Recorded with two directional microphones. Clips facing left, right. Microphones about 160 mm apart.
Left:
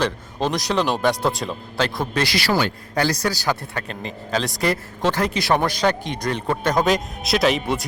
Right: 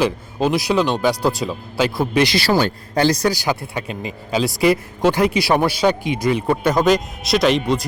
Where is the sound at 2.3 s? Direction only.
30° right (ahead or behind).